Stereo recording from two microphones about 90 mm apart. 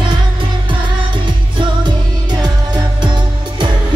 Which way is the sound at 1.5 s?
55° right (ahead or behind).